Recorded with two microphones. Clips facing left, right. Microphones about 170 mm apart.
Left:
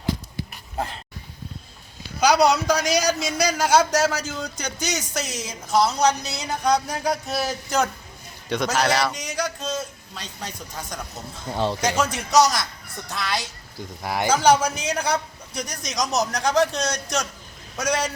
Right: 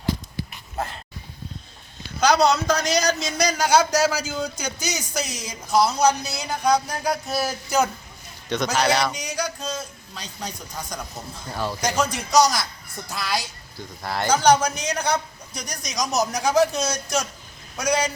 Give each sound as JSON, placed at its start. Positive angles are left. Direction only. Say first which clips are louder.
{"t": 2.2, "sound": "a man's voice", "louder": "left 1 dB", "side_deg": 10}
{"t": 11.5, "sound": "speech", "louder": "left 3 dB", "side_deg": 25}
{"t": 11.9, "sound": "a man's voice", "louder": "even", "side_deg": 5}
{"t": 14.0, "sound": "a man's voice", "louder": "even", "side_deg": 10}